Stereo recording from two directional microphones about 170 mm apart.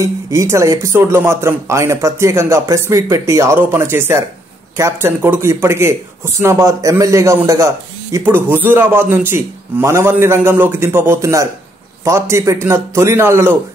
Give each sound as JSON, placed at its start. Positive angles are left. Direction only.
{"t": 0.0, "sound": "speech", "side_deg": -15}